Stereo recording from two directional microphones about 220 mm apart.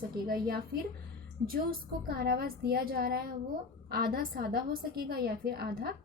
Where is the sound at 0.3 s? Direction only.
40° right (ahead or behind).